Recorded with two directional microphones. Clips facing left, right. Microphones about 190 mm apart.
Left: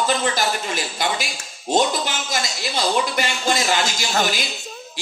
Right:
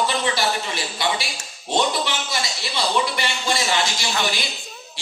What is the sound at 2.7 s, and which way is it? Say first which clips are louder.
Speech: left 2 dB; 45° left (ahead or behind).